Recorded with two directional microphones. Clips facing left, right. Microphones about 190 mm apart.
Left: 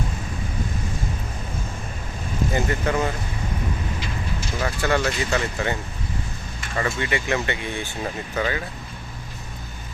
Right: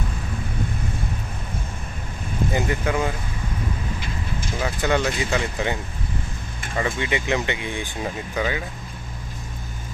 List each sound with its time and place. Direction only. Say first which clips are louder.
2.5 s speech: even; 15° right (ahead or behind)
4.6 s speech: even; 15° right (ahead or behind)
6.7 s speech: even; 15° right (ahead or behind)